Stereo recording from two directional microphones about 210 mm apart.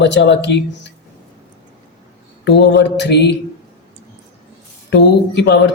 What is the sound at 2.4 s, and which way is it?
Speech, 55° left (ahead or behind).